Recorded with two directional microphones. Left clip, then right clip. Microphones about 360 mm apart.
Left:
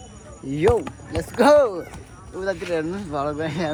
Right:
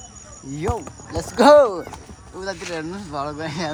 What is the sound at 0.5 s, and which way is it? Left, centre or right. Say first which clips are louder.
Speech: left 7 dB; centre.